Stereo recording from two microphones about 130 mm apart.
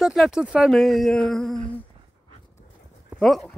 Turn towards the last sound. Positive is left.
turn(degrees=0)  # may be behind; listen again after turning